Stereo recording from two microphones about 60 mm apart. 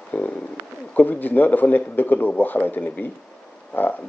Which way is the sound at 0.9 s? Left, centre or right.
Left.